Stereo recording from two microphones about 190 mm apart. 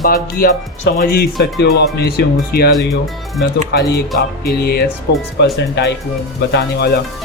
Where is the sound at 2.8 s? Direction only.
Centre (ahead or behind).